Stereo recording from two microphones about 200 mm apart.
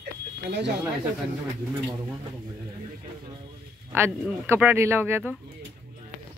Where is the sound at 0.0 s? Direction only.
60° right (ahead or behind).